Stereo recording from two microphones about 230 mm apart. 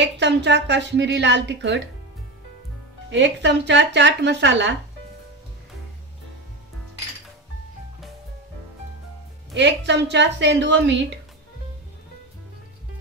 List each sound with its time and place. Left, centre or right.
0.0 s a woman's voice: right
3.1 s a woman's voice: right
9.5 s a woman's voice: right